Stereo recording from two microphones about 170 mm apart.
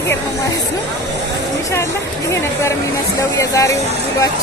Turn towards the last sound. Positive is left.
turn(degrees=20)  # may be behind; listen again after turning